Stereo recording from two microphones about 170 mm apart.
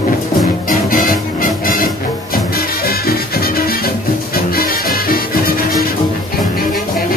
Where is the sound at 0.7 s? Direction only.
55° left (ahead or behind).